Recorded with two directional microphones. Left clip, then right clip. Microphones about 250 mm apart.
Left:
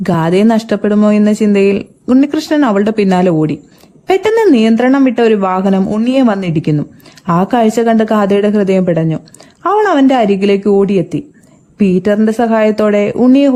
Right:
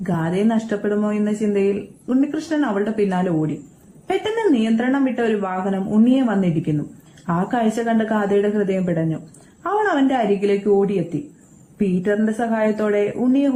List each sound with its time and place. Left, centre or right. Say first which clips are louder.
0.0 s speech: left 10 dB; left